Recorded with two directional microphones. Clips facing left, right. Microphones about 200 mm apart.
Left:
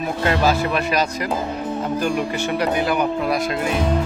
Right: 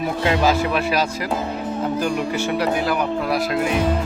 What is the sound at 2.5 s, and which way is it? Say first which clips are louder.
Speech: left 2 dB; 5° right (ahead or behind).